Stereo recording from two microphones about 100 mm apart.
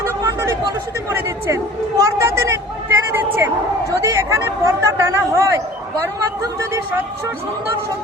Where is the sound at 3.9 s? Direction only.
35° right (ahead or behind).